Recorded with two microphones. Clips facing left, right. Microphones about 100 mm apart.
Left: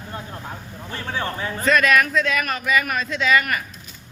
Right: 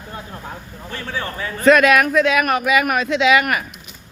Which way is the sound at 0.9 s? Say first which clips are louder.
Even; 25° left (ahead or behind).